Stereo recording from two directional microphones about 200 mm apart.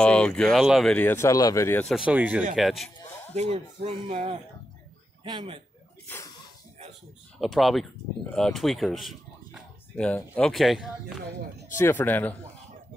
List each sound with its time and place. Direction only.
0.0 s speech: 5° left (ahead or behind)
2.0 s speech: 5° right (ahead or behind)
3.3 s a man's voice: 35° right (ahead or behind)
6.0 s sneeze: 15° left (ahead or behind)
7.3 s speech: centre (ahead or behind)
11.7 s a man's voice: 10° left (ahead or behind)